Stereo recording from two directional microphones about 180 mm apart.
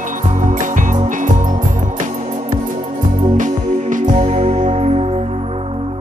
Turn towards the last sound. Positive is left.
turn(degrees=-35)  # may be behind; listen again after turning